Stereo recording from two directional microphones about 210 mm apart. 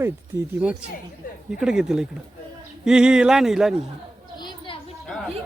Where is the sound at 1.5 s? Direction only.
5° right (ahead or behind).